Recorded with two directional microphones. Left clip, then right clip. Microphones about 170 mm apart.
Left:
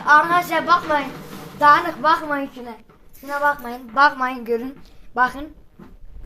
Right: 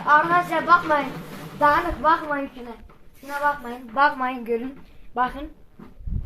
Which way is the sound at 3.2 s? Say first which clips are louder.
Left 3 dB; 25° left (ahead or behind).